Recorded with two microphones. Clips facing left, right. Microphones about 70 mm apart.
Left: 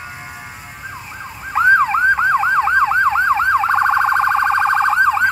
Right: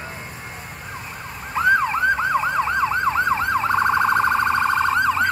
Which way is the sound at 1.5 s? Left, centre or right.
Left.